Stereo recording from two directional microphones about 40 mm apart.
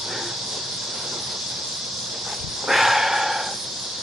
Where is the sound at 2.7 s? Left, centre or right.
Centre.